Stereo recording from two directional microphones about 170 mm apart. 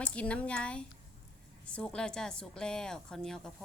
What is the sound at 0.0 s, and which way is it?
Speech, 5° left (ahead or behind).